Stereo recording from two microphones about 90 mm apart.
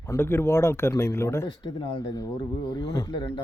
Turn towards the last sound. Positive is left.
turn(degrees=50)  # may be behind; listen again after turning